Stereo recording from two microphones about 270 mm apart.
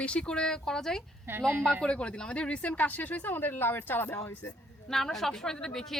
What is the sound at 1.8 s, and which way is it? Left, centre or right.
A woman's voice, centre.